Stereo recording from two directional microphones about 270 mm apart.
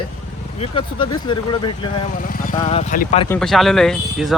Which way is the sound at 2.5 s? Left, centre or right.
Centre.